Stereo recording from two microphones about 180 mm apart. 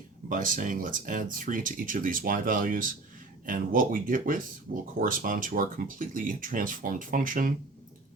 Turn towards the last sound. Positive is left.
turn(degrees=-50)  # may be behind; listen again after turning